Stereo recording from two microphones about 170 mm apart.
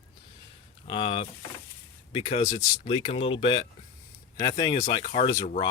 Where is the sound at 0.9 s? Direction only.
30° left (ahead or behind).